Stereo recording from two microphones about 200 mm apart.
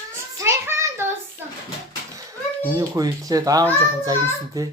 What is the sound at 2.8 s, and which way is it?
Speech, 15° right (ahead or behind).